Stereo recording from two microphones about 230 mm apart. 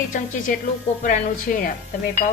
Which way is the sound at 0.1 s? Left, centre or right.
Left.